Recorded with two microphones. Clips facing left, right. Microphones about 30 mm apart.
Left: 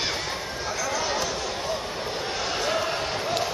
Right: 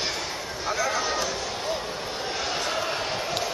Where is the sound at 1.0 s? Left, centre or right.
Centre.